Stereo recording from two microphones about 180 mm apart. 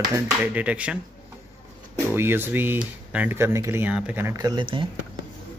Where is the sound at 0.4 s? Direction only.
5° right (ahead or behind).